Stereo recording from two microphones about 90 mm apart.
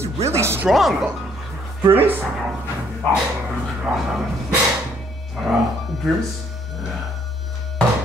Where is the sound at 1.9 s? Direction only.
90° right.